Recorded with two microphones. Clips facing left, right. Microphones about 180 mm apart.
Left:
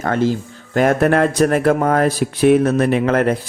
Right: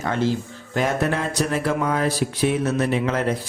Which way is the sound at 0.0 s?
50° left (ahead or behind).